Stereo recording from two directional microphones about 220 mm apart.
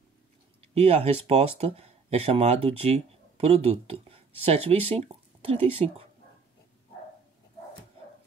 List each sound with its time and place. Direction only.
0.7 s speech: 30° right (ahead or behind)